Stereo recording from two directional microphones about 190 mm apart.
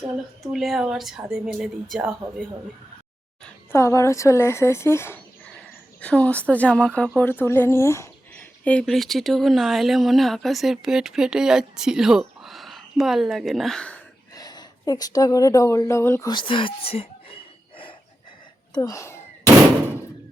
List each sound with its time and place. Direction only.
0.4 s speech: centre (ahead or behind)
3.4 s speech: 15° left (ahead or behind)
14.3 s a woman's voice: 20° left (ahead or behind)
16.3 s a sound: 25° left (ahead or behind)
18.7 s speech: 15° left (ahead or behind)